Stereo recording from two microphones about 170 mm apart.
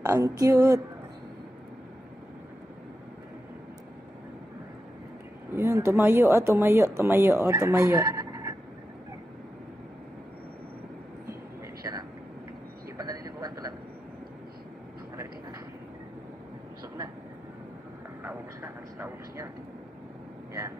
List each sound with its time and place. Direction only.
0.0 s a sound: 20° right (ahead or behind)
5.5 s speech: 15° right (ahead or behind)
12.9 s vehicle: 20° right (ahead or behind)
18.2 s vehicle: 15° right (ahead or behind)